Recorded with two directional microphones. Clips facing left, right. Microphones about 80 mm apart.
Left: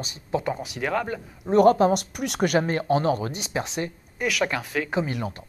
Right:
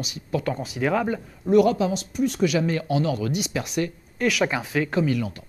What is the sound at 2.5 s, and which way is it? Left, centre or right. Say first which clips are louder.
Speech: left 2 dB; left.